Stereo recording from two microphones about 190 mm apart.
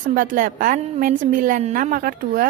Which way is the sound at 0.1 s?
45° right (ahead or behind).